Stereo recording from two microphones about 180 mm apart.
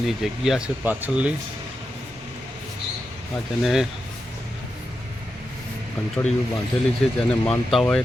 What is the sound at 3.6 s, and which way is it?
Speech, centre (ahead or behind).